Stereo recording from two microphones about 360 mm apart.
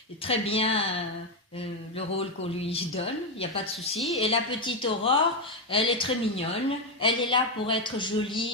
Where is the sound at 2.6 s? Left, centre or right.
Centre.